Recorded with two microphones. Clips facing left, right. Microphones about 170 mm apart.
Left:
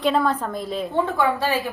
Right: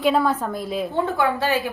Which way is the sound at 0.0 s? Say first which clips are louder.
Right 1 dB; 5° right (ahead or behind).